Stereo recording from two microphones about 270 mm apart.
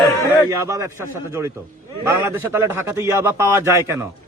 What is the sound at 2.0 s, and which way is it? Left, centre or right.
A man's voice, centre.